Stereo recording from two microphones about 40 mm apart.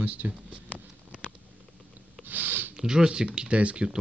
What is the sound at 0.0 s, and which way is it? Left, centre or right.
Speech, right.